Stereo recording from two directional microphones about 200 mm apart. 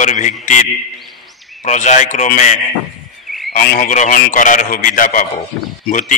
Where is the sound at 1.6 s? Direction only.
35° left (ahead or behind).